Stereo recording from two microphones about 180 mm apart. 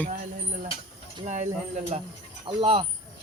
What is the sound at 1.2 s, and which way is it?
Bird, 40° right (ahead or behind).